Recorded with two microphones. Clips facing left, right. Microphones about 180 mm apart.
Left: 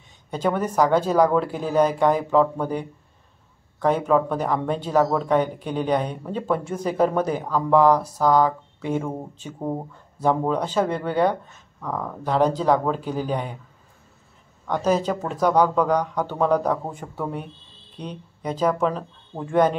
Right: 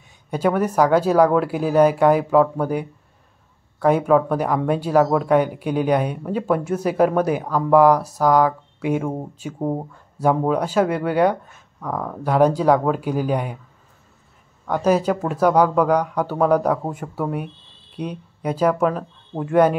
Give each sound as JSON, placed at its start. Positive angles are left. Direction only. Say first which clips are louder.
{"t": 0.3, "sound": "speech", "louder": "right 4 dB", "side_deg": -10}
{"t": 14.7, "sound": "speech", "louder": "right 3 dB", "side_deg": -10}